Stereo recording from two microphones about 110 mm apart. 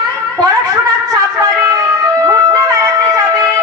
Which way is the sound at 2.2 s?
35° right (ahead or behind).